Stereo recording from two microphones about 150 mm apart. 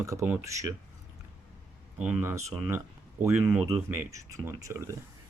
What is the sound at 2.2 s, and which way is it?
Speech, 15° right (ahead or behind).